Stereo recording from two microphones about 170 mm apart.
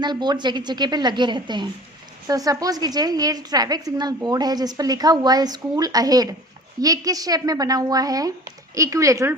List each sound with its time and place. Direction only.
0.0 s a woman's voice: 25° right (ahead or behind)